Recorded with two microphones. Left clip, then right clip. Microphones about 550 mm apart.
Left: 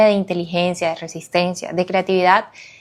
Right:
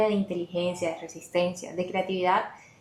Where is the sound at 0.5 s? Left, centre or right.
Left.